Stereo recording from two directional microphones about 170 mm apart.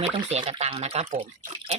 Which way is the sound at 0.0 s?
40° right (ahead or behind).